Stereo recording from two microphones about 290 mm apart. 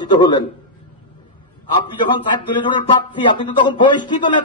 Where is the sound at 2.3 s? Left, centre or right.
Centre.